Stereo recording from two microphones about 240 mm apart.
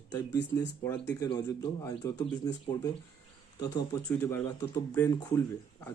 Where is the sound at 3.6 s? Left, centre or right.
Centre.